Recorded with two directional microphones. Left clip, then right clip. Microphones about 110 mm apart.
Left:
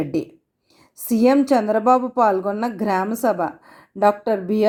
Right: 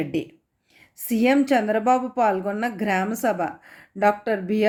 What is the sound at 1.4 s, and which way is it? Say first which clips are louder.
A woman's voice: left 3 dB; 30° left (ahead or behind).